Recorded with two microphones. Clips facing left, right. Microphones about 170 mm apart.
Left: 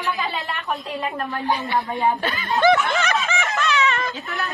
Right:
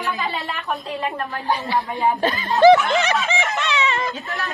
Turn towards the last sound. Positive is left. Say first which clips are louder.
# right 1 dB
turn(degrees=-35)  # may be behind; listen again after turning